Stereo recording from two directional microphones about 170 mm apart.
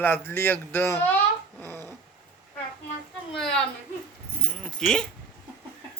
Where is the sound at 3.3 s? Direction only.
Centre (ahead or behind).